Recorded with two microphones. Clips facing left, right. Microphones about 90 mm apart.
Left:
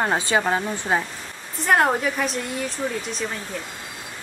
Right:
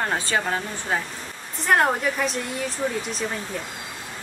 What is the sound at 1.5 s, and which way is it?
Speech, centre (ahead or behind).